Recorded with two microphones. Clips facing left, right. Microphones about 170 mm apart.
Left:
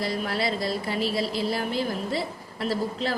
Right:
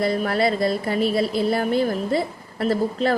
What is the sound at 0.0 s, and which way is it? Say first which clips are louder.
A woman's voice: right 7 dB; 55° right (ahead or behind).